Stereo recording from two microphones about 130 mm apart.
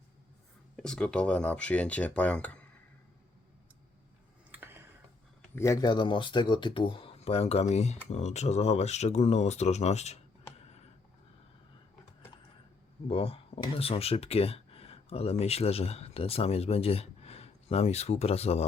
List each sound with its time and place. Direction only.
0.8 s speech: 5° left (ahead or behind)
4.5 s a sound: 15° right (ahead or behind)
5.5 s speech: 25° left (ahead or behind)
5.8 s speech: 35° left (ahead or behind); by 10.2 s 60° left (ahead or behind)
13.1 s speech: 45° left (ahead or behind)